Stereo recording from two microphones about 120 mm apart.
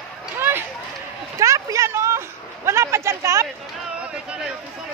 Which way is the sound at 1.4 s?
25° right (ahead or behind).